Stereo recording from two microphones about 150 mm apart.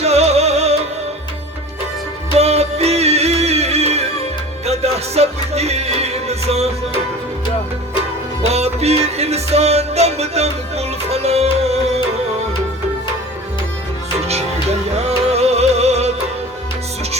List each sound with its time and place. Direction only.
0.0 s music: 45° right (ahead or behind)
2.4 s music: 45° right (ahead or behind)
8.4 s music: 45° right (ahead or behind)
14.3 s music: 45° right (ahead or behind)